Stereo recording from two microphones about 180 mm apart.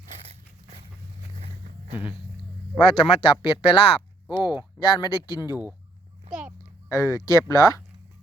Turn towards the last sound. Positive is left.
turn(degrees=20)  # may be behind; listen again after turning